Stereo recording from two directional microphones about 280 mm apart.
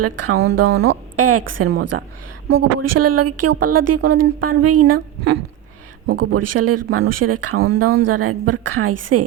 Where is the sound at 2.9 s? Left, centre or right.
Right.